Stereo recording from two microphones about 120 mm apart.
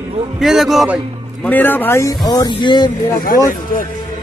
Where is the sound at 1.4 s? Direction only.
15° left (ahead or behind); by 2.9 s 35° left (ahead or behind).